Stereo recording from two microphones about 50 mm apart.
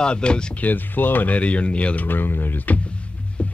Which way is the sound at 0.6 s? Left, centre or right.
Left.